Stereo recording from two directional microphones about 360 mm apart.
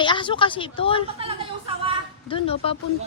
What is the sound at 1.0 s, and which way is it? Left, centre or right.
Speech, centre.